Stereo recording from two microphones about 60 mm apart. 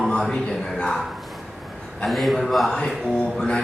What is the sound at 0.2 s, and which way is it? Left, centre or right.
Speech, centre.